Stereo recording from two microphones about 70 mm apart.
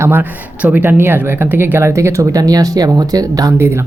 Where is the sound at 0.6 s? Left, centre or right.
Right.